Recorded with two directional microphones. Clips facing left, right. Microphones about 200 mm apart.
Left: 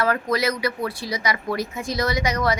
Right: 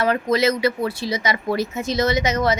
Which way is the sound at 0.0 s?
20° right (ahead or behind).